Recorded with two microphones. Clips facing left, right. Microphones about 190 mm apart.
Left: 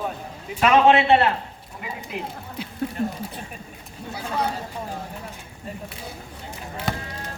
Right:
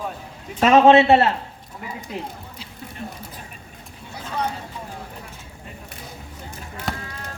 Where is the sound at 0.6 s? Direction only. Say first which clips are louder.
Right 3 dB; 40° right (ahead or behind).